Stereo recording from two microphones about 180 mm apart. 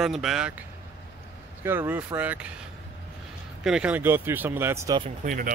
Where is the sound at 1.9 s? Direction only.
10° right (ahead or behind).